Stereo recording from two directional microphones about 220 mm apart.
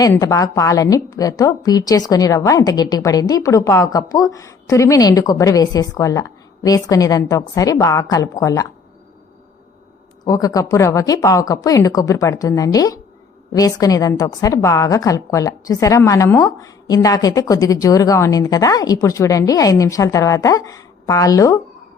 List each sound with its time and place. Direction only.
0.0 s a woman's voice: 15° left (ahead or behind)
10.2 s a woman's voice: 15° left (ahead or behind)